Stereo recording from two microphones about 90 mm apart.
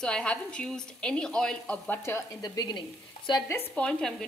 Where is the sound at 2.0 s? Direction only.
30° left (ahead or behind).